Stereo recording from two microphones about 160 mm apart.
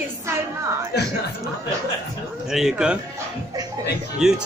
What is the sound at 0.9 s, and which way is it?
Speech, 90° left.